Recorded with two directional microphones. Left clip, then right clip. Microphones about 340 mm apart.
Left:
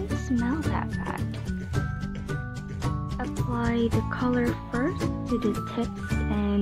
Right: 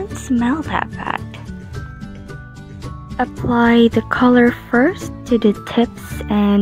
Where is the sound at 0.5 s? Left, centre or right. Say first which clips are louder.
Right 10 dB; centre.